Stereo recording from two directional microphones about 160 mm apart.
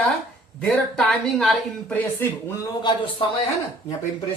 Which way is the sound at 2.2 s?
15° left (ahead or behind).